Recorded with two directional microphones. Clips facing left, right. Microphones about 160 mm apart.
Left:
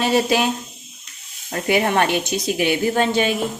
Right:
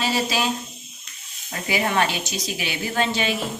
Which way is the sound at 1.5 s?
55° left (ahead or behind).